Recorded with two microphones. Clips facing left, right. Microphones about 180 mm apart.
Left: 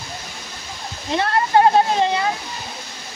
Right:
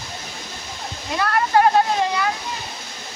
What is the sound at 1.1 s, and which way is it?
Speech, 25° left (ahead or behind).